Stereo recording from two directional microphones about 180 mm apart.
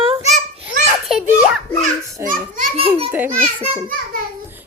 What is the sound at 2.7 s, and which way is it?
Speech, 30° right (ahead or behind).